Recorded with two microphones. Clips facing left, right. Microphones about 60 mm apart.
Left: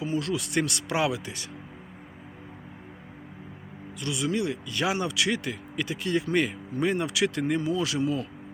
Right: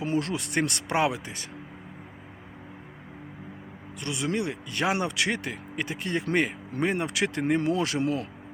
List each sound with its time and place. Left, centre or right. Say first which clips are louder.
0.0 s speech: right 1 dB; right
4.0 s speech: left 1 dB; right